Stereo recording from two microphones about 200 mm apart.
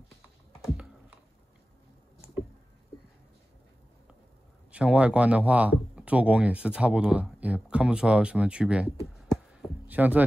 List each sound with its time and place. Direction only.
4.7 s speech: 5° right (ahead or behind)
9.6 s heart sounds: 10° right (ahead or behind)